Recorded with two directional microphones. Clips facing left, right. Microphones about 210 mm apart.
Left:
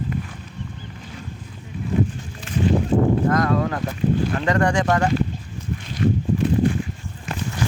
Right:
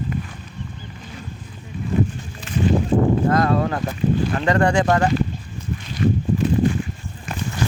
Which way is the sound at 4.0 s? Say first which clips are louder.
Even; 50° left (ahead or behind).